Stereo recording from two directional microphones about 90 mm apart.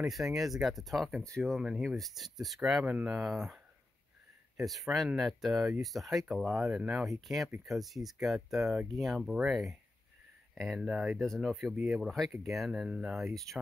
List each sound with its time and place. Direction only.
0.0 s speech: 5° right (ahead or behind)
2.8 s speech: 15° right (ahead or behind)
3.2 s speech: 5° right (ahead or behind)
4.6 s speech: centre (ahead or behind)